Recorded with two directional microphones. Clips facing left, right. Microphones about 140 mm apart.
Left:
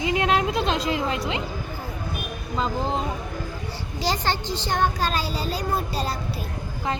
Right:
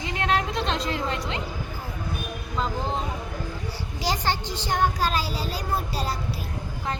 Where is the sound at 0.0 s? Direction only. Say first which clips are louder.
Left 4 dB; 5° left (ahead or behind).